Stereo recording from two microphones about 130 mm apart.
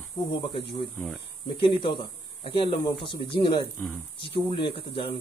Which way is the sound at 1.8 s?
40° left (ahead or behind).